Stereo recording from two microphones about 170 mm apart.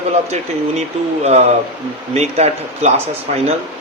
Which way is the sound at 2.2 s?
40° right (ahead or behind).